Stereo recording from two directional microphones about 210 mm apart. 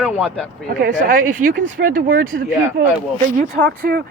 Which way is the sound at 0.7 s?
40° right (ahead or behind).